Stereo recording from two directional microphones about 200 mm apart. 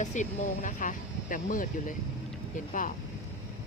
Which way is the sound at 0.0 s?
40° left (ahead or behind).